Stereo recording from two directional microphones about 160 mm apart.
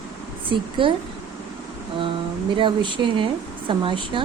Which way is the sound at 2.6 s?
30° right (ahead or behind).